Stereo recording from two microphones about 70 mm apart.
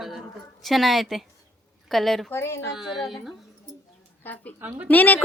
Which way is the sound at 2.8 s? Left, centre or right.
Centre.